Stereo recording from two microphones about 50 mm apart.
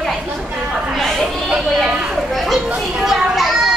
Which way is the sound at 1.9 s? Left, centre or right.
Centre.